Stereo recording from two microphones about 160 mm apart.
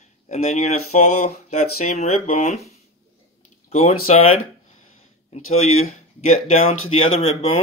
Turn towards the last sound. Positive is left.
turn(degrees=40)  # may be behind; listen again after turning